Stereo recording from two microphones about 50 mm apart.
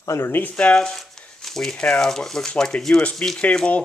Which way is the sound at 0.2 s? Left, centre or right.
Left.